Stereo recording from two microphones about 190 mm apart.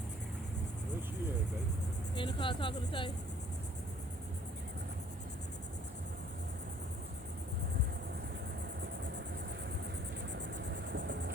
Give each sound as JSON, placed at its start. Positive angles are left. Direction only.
{"t": 2.1, "sound": "speech", "side_deg": 25}
{"t": 10.3, "sound": "vehicle", "side_deg": -65}